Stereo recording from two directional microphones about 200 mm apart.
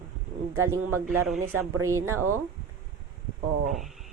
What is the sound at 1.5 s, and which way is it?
Speech, 90° right.